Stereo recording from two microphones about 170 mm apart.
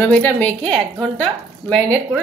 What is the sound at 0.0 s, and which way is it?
Speech, 10° left (ahead or behind).